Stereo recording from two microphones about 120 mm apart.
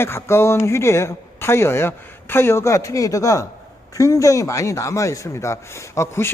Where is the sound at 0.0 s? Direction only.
20° left (ahead or behind).